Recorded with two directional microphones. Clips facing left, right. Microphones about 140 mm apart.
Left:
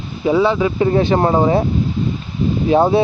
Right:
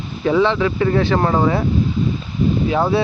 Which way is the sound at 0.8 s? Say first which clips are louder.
Left 4 dB; 25° left (ahead or behind).